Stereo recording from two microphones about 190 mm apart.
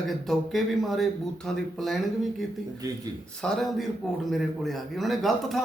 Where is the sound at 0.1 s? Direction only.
Centre (ahead or behind).